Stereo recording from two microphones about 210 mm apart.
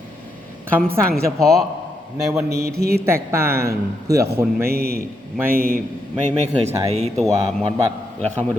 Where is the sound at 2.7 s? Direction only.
50° right (ahead or behind).